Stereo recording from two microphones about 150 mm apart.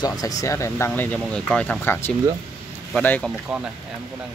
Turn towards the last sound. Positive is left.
turn(degrees=10)  # may be behind; listen again after turning